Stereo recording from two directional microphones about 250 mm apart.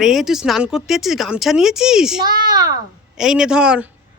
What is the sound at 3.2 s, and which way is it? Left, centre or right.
Speech, centre.